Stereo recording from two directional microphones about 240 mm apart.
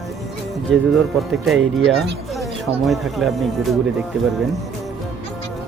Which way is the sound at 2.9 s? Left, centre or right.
Centre.